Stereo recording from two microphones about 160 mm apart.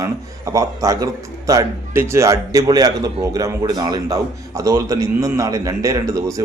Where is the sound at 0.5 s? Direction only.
20° right (ahead or behind).